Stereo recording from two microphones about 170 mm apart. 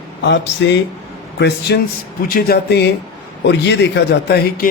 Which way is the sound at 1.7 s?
75° left (ahead or behind).